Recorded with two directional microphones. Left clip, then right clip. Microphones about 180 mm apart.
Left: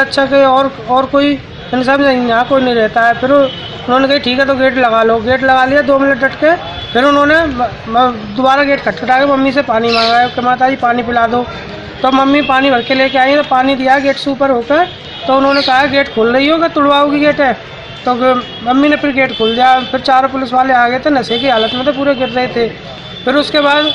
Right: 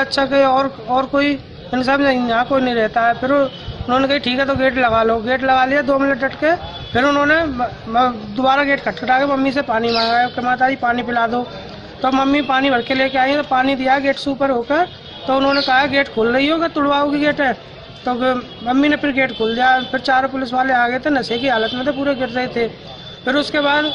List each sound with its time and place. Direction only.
0.0 s speech: 15° right (ahead or behind)
10.5 s speech: 30° right (ahead or behind)
11.1 s a woman's voice: 10° right (ahead or behind)
23.5 s speech: 35° right (ahead or behind)